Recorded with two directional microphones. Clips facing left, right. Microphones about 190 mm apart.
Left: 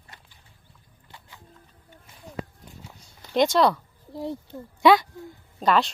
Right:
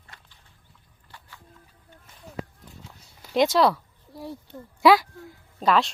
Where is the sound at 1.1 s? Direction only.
20° left (ahead or behind).